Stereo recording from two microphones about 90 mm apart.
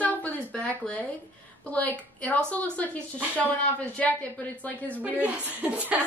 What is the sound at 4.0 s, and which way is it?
A woman's voice, 15° left (ahead or behind).